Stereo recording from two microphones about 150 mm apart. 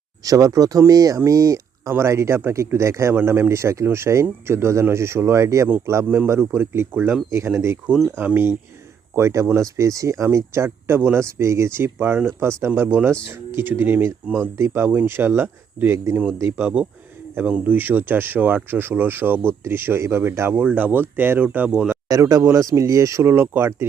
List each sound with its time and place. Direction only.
0.3 s speech: 20° right (ahead or behind)
22.1 s speech: 20° right (ahead or behind)